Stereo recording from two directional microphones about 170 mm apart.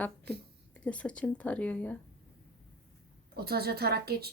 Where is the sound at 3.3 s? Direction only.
65° right (ahead or behind).